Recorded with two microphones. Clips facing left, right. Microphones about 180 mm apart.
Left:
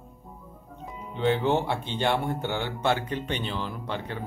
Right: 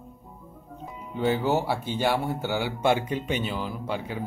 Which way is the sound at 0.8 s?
5° right (ahead or behind).